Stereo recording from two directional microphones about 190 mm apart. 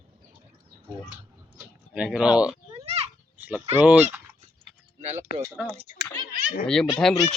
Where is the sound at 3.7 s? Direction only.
5° right (ahead or behind).